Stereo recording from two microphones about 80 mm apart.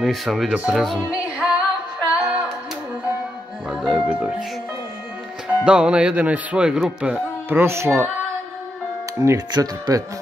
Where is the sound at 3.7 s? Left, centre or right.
Centre.